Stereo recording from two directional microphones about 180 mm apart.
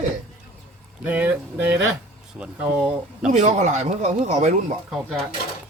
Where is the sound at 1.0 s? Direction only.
10° right (ahead or behind).